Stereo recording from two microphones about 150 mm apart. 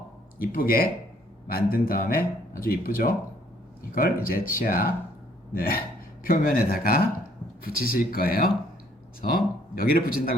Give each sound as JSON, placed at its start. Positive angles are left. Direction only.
{"t": 0.3, "sound": "speech", "side_deg": 75}